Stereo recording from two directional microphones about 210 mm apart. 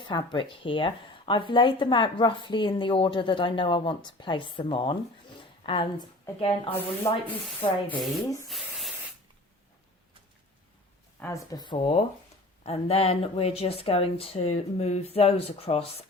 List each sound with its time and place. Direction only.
0.0 s speech: 20° left (ahead or behind)
7.0 s speech: 10° left (ahead or behind)
8.4 s spray: centre (ahead or behind)
11.2 s speech: 15° left (ahead or behind)